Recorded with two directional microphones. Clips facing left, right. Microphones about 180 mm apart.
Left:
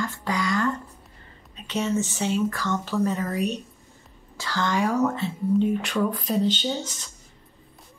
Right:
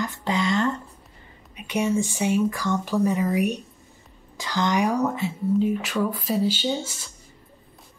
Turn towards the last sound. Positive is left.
turn(degrees=-10)  # may be behind; listen again after turning